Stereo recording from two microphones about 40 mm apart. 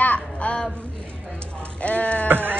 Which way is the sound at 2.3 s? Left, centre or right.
Right.